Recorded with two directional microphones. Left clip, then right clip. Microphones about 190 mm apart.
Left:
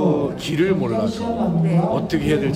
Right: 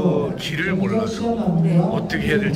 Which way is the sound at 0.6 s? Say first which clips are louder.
Left 3 dB; 20° left (ahead or behind).